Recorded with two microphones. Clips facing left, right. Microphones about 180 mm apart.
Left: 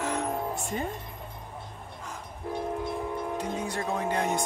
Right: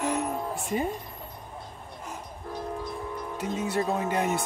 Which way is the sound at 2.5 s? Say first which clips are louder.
Left 3 dB; 25° left (ahead or behind).